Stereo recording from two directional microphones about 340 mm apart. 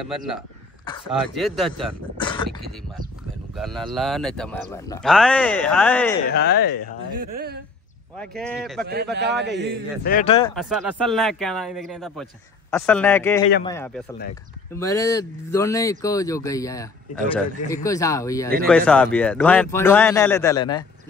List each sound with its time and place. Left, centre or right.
1.3 s speech: centre
2.1 s a sound: centre
3.5 s speech: centre
6.2 s speech: left
7.3 s a man's voice: right
8.2 s speech: centre
8.8 s a man's voice: right
10.0 s speech: left
10.5 s speech: centre